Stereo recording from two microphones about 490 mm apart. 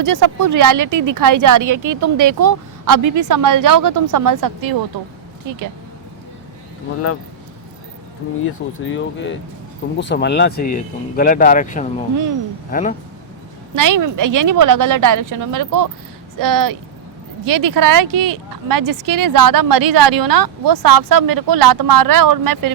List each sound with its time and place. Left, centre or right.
0.0 s speech: right
8.4 s speech: left
13.7 s speech: right